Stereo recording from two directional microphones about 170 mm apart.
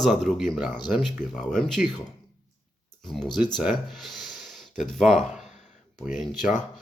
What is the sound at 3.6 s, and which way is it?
Speech, centre (ahead or behind).